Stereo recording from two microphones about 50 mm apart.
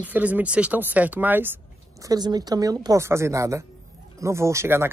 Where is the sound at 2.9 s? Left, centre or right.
Right.